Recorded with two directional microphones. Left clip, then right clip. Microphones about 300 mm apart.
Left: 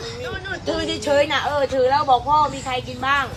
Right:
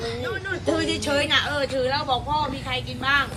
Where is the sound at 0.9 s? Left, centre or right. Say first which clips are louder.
Left 6 dB; left.